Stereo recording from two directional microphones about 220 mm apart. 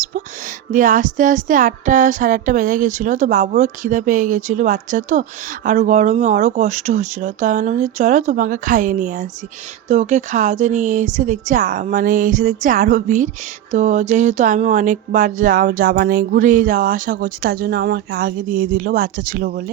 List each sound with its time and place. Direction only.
0.7 s speech: 35° right (ahead or behind)